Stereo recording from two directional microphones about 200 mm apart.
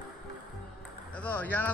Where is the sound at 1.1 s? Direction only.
5° left (ahead or behind).